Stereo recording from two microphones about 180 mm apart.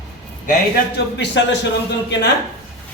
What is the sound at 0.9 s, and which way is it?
Speech, 80° left.